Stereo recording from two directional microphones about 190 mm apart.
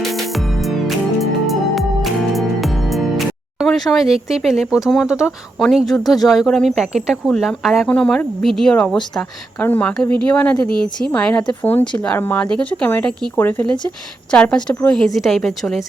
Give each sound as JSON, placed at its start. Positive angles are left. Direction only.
{"t": 0.0, "sound": "music", "side_deg": 0}
{"t": 5.6, "sound": "speech", "side_deg": 0}